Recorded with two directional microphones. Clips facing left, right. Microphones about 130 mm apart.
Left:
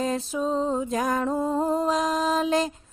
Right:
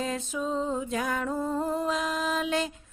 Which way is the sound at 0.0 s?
35° left (ahead or behind).